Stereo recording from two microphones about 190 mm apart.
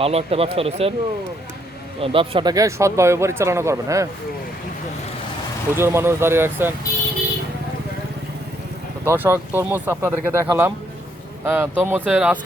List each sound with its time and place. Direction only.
0.0 s speech: 30° right (ahead or behind)
2.0 s speech: 30° right (ahead or behind)
5.7 s speech: 15° right (ahead or behind)
9.0 s speech: 10° right (ahead or behind)